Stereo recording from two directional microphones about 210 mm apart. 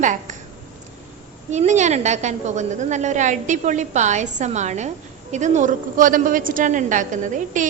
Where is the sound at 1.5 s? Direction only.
35° right (ahead or behind).